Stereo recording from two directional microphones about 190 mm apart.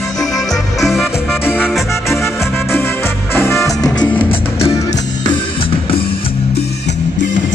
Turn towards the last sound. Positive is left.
turn(degrees=30)  # may be behind; listen again after turning